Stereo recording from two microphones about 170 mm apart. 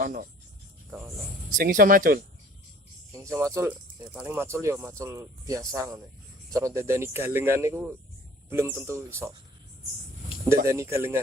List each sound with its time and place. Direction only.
0.0 s speech: 50° right (ahead or behind)
0.9 s speech: 15° right (ahead or behind)
1.5 s speech: 55° right (ahead or behind)
3.1 s speech: 15° right (ahead or behind)
10.7 s speech: 15° right (ahead or behind)